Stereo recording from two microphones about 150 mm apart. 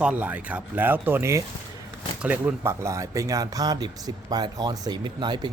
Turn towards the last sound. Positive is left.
turn(degrees=-30)  # may be behind; listen again after turning